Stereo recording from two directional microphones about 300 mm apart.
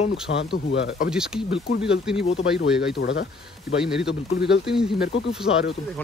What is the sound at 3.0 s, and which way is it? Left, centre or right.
Speech, left.